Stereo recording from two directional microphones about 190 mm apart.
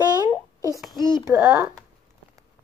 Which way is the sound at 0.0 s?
20° right (ahead or behind).